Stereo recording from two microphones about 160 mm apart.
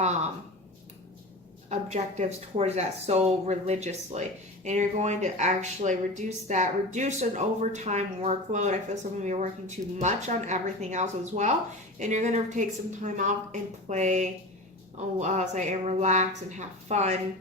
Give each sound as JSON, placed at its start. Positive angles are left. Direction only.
{"t": 1.7, "sound": "speech", "side_deg": -45}